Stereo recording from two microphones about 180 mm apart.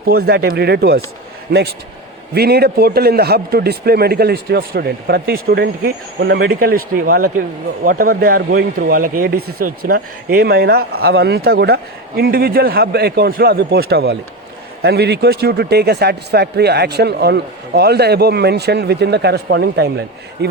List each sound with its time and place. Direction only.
0.0 s speech: 60° right (ahead or behind)